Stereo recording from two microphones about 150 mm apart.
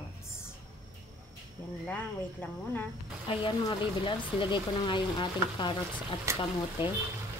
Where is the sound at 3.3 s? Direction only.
30° left (ahead or behind).